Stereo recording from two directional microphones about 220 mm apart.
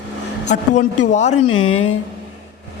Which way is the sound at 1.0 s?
30° left (ahead or behind).